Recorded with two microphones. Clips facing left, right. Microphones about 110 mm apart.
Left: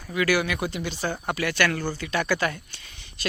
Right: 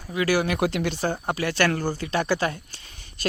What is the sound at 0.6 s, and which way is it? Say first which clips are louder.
Speech: right 5 dB; 75° right (ahead or behind).